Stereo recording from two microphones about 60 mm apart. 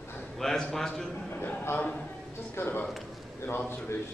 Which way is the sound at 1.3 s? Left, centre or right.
Left.